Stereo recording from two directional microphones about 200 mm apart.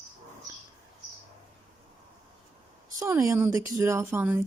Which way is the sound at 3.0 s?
15° right (ahead or behind).